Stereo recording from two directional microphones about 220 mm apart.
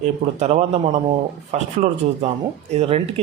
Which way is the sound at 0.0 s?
30° right (ahead or behind).